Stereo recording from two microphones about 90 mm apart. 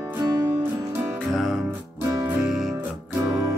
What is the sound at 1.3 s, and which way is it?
Music, centre (ahead or behind).